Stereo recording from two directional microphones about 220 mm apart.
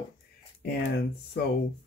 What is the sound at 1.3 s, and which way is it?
Speech, 50° left (ahead or behind).